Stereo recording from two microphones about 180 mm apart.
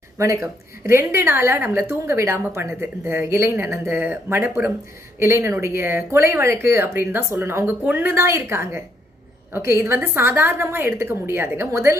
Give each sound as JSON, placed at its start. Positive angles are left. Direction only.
{"t": 0.2, "sound": "a woman's voice", "side_deg": -15}